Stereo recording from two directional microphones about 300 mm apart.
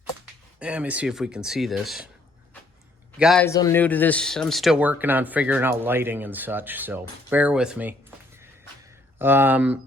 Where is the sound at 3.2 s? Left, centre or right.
Centre.